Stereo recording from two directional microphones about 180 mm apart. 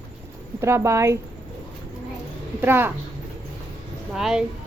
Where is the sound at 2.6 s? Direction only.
10° right (ahead or behind).